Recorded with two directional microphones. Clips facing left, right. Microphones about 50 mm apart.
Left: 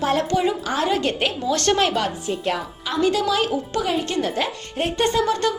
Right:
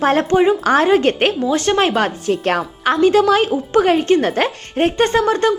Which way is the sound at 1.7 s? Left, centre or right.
Right.